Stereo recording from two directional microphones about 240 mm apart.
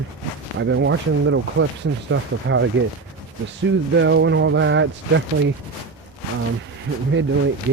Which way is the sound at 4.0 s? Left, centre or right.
Right.